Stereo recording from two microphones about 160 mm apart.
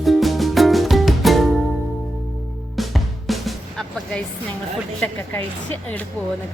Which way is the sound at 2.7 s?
Centre (ahead or behind).